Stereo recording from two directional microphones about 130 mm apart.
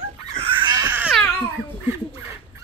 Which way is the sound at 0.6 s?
30° right (ahead or behind).